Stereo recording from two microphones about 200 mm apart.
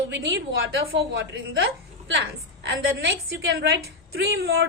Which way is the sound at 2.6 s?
60° right (ahead or behind).